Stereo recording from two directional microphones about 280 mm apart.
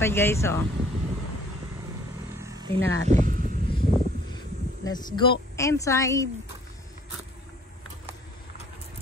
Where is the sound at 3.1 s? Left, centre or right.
Right.